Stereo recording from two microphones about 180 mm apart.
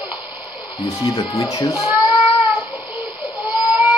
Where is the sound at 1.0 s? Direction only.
25° left (ahead or behind).